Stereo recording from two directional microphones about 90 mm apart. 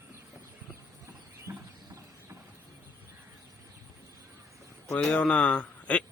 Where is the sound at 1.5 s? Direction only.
30° right (ahead or behind).